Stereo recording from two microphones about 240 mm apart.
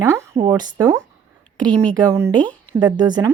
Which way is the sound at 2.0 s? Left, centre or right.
Centre.